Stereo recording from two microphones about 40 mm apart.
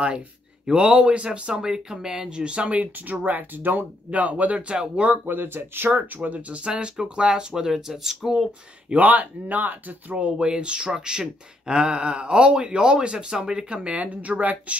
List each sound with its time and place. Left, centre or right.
0.7 s speech: right
1.5 s speech: centre; by 4.7 s right
5.2 s speech: right
6.5 s speech: right; by 8.5 s centre
8.9 s speech: right
10.1 s speech: right
13.8 s speech: right